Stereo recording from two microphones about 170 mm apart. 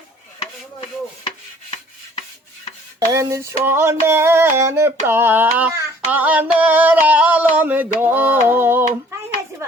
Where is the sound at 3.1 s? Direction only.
15° right (ahead or behind).